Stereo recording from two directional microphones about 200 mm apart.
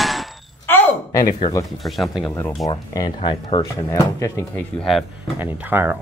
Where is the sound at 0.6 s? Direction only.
10° left (ahead or behind).